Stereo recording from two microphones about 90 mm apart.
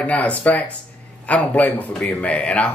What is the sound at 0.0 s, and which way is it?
A man's voice, 15° left (ahead or behind).